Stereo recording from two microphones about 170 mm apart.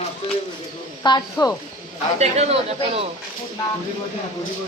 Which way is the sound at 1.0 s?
20° left (ahead or behind).